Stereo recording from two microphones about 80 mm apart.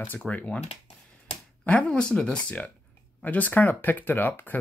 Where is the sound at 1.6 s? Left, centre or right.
Centre.